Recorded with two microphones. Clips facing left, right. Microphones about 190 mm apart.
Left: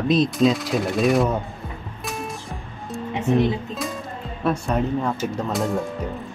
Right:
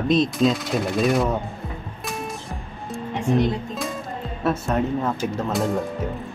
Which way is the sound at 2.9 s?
Centre (ahead or behind).